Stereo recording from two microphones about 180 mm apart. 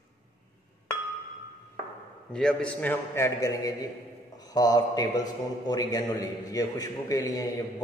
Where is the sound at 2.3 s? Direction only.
5° left (ahead or behind).